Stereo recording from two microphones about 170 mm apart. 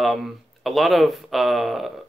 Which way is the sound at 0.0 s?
Centre (ahead or behind).